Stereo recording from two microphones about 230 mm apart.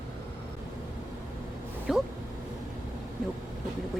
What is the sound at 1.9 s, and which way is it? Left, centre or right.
Speech, centre.